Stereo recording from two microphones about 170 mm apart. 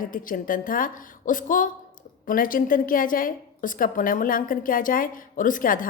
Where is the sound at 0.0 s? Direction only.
55° left (ahead or behind).